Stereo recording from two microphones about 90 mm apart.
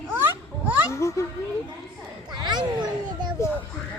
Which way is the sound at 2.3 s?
55° right (ahead or behind).